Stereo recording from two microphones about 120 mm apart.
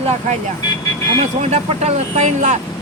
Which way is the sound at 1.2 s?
70° right (ahead or behind).